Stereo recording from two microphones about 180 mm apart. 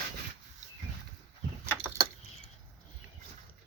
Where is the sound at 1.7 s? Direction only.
15° right (ahead or behind).